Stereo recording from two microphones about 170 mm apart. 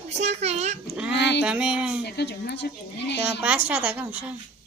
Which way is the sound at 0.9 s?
5° right (ahead or behind).